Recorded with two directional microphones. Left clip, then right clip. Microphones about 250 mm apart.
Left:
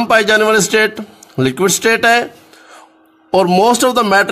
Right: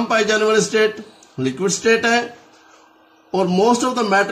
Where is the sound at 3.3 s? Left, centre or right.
Left.